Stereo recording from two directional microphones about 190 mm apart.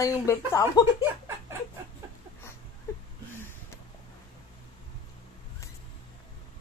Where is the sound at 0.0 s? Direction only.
15° left (ahead or behind).